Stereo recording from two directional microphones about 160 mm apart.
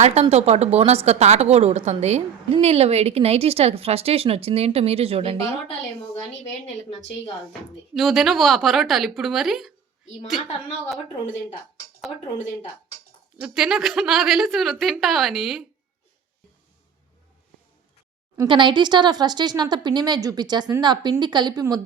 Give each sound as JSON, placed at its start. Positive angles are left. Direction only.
{"t": 0.0, "sound": "a woman's voice", "side_deg": -40}
{"t": 7.9, "sound": "a woman's voice", "side_deg": 0}
{"t": 13.4, "sound": "a woman's voice", "side_deg": -5}
{"t": 18.4, "sound": "a woman's voice", "side_deg": -30}